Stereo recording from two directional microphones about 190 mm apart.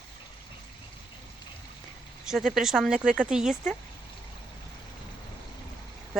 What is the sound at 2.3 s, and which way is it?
Speech, centre (ahead or behind).